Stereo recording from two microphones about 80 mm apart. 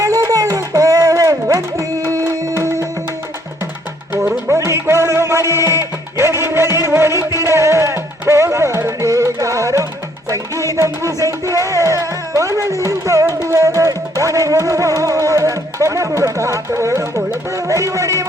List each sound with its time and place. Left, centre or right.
0.0 s a sound: right
2.6 s music: right
4.1 s music: right
4.4 s music: right